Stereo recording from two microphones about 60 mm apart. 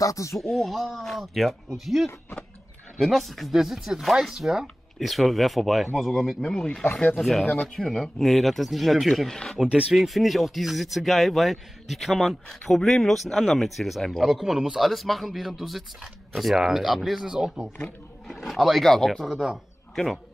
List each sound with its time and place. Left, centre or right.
0.0 s speech: left
0.4 s speech: centre
6.4 s speech: centre
6.8 s speech: left
7.2 s speech: centre
7.5 s speech: centre
9.6 s speech: centre
9.9 s speech: centre